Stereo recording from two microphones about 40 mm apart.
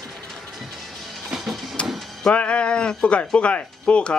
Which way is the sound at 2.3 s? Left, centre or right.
Left.